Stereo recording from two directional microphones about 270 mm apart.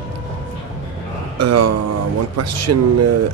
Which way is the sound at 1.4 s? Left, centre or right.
Right.